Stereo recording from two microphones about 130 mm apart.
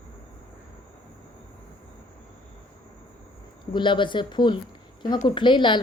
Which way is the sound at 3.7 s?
40° left (ahead or behind).